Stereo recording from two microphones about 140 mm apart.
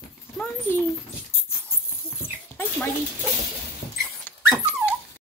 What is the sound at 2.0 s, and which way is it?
Dog, 15° left (ahead or behind).